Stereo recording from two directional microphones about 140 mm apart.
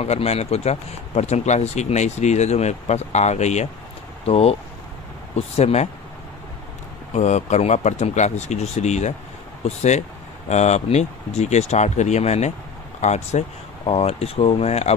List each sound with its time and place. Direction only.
0.0 s speech: 50° left (ahead or behind)
7.2 s speech: 55° left (ahead or behind)
13.8 s speech: 45° left (ahead or behind)